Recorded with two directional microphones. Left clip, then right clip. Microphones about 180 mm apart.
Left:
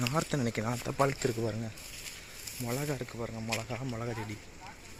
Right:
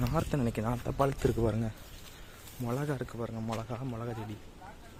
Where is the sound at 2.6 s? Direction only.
5° right (ahead or behind).